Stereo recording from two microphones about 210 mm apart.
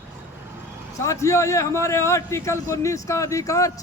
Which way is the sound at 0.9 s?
15° left (ahead or behind).